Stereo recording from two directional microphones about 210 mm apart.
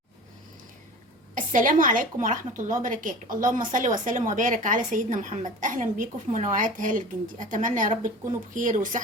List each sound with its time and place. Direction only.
1.4 s a woman's voice: 40° right (ahead or behind)